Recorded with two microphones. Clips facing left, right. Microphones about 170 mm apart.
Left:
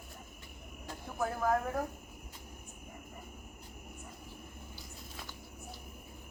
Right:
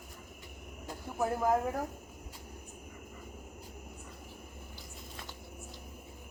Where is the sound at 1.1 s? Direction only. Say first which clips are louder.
Right 2 dB; 20° right (ahead or behind).